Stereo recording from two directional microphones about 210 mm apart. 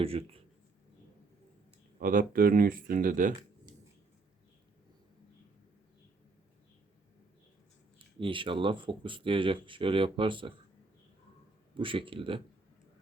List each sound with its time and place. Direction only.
0.0 s speech: 25° right (ahead or behind)
2.0 s speech: 40° right (ahead or behind)
7.9 s speech: 25° right (ahead or behind)
11.8 s speech: 25° right (ahead or behind)